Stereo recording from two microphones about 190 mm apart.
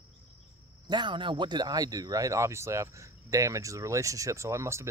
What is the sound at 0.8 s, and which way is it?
Speech, 25° right (ahead or behind).